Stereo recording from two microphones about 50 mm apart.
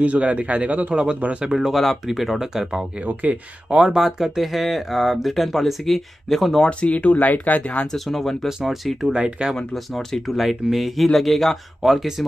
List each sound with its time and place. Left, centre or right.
0.0 s a man's voice: right
1.5 s speech: centre
3.0 s speech: right
3.7 s a man's voice: centre
4.0 s speech: centre
6.6 s speech: left
7.8 s speech: centre
8.5 s speech: centre
9.1 s speech: centre
9.9 s speech: centre